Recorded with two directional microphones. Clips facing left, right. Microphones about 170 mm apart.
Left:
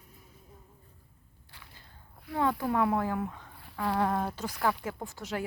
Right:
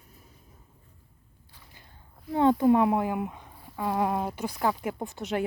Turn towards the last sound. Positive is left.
turn(degrees=-20)  # may be behind; listen again after turning